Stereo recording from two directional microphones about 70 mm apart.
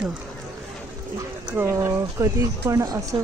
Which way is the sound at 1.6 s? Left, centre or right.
Right.